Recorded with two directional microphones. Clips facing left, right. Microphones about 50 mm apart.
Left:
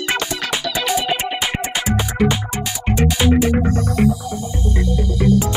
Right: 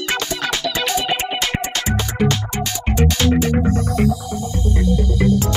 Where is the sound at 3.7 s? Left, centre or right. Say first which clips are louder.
Left 1 dB; left.